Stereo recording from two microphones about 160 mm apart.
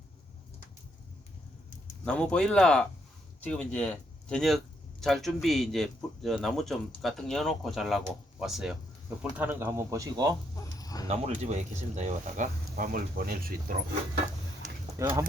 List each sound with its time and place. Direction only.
2.0 s speech: 5° left (ahead or behind); by 10.3 s 20° right (ahead or behind)
10.5 s chicken: 20° left (ahead or behind)
11.1 s speech: 45° right (ahead or behind); by 13.7 s 65° right (ahead or behind)
15.0 s speech: 20° right (ahead or behind)